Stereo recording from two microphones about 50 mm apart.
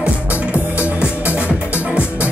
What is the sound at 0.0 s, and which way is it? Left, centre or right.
Music, right.